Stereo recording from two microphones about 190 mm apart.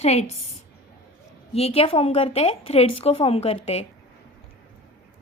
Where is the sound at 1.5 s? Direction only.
30° left (ahead or behind).